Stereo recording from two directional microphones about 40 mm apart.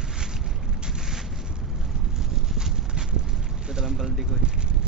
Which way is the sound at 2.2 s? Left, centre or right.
Centre.